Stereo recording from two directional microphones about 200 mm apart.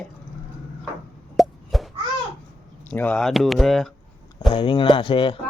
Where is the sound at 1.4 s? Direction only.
Centre (ahead or behind).